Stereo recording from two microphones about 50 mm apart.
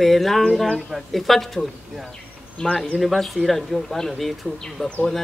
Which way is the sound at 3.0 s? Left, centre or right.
Centre.